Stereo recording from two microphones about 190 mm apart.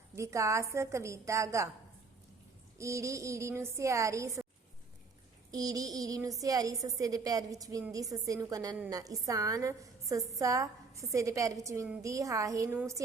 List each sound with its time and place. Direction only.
0.2 s a woman's voice: 15° right (ahead or behind)
2.7 s a woman's voice: 15° right (ahead or behind)
5.5 s child singing: 20° right (ahead or behind)
6.4 s a woman's voice: 20° right (ahead or behind)